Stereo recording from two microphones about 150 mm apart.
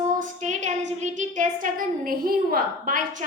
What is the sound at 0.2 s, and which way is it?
A woman's voice, 55° right (ahead or behind).